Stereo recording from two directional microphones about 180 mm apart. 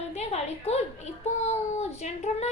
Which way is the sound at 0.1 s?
40° left (ahead or behind).